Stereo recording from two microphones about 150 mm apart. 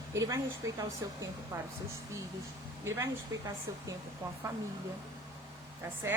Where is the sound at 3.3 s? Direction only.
25° right (ahead or behind).